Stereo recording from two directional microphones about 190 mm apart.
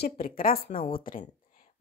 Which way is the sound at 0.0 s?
50° left (ahead or behind).